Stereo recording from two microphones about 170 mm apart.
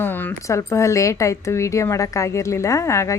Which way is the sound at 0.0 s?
10° left (ahead or behind).